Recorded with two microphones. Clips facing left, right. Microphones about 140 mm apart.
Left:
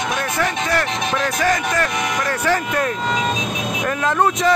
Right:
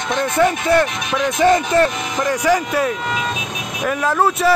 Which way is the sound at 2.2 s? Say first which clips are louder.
Right 6 dB; 15° right (ahead or behind).